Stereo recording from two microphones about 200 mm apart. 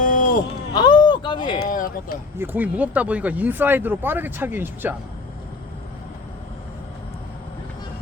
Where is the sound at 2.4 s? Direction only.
10° right (ahead or behind).